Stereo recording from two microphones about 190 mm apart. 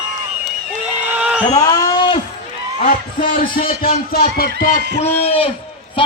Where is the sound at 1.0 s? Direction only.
5° right (ahead or behind).